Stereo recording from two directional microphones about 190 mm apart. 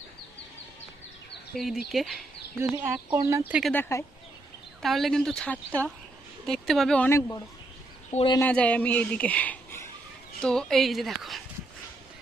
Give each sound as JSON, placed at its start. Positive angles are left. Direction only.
{"t": 1.5, "sound": "a woman's voice", "side_deg": 0}
{"t": 2.7, "sound": "speech", "side_deg": -10}
{"t": 3.6, "sound": "a woman's voice", "side_deg": 10}
{"t": 4.8, "sound": "a woman's voice", "side_deg": 0}
{"t": 8.1, "sound": "speech", "side_deg": 30}
{"t": 8.4, "sound": "a woman's voice", "side_deg": 10}